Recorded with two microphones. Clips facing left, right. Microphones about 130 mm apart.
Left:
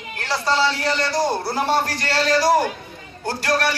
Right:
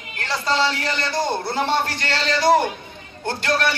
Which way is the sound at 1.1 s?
10° left (ahead or behind).